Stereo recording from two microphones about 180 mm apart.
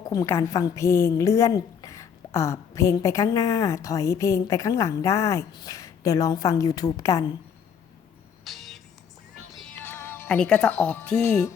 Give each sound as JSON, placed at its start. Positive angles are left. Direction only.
{"t": 0.1, "sound": "a woman's voice", "side_deg": 15}
{"t": 8.4, "sound": "music", "side_deg": 0}
{"t": 9.8, "sound": "speech", "side_deg": 10}